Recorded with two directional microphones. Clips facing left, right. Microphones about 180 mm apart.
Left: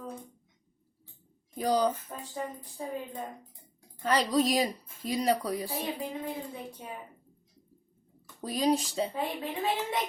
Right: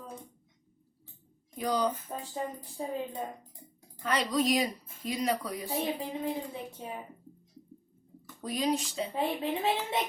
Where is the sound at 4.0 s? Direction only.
35° left (ahead or behind).